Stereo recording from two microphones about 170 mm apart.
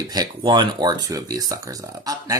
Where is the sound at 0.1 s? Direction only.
25° right (ahead or behind).